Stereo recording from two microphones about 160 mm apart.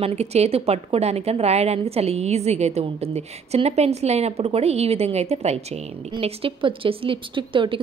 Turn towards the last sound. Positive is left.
turn(degrees=-30)  # may be behind; listen again after turning